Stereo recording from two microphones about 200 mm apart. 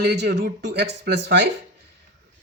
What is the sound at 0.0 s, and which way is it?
Speech, 55° right (ahead or behind).